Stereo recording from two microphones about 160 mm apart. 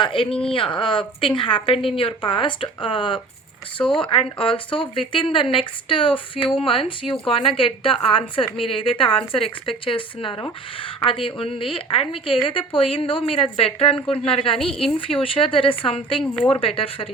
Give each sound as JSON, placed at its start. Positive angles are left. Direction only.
{"t": 0.0, "sound": "speech", "side_deg": 35}
{"t": 14.6, "sound": "a woman's voice", "side_deg": 5}
{"t": 14.9, "sound": "speech", "side_deg": 35}
{"t": 16.2, "sound": "speech", "side_deg": 5}
{"t": 16.5, "sound": "speech", "side_deg": 35}